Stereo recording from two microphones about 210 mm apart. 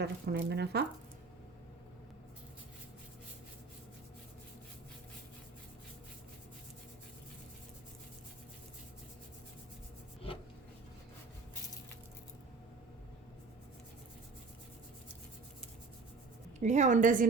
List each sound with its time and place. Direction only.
0.0 s speech: 50° right (ahead or behind)
16.6 s a woman's voice: 35° right (ahead or behind)